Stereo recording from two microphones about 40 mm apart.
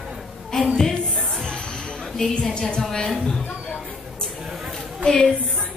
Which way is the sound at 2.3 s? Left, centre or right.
Left.